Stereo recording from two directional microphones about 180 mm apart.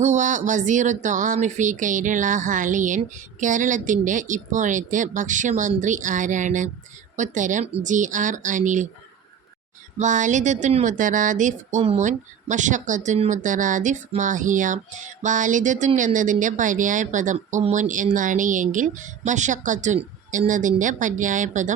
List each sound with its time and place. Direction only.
0.0 s speech: 40° right (ahead or behind)
10.0 s speech: 45° right (ahead or behind)